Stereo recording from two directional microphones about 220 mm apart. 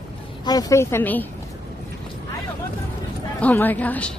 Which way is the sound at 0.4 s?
15° left (ahead or behind).